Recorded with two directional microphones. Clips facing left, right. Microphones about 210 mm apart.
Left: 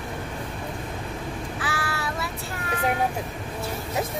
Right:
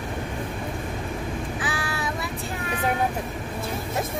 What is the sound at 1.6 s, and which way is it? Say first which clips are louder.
Child singing: right 1 dB; 20° right (ahead or behind).